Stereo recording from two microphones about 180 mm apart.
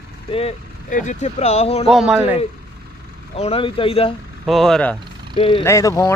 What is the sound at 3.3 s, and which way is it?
Speech, 35° left (ahead or behind).